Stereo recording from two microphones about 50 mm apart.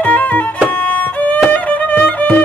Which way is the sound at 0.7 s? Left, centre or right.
Left.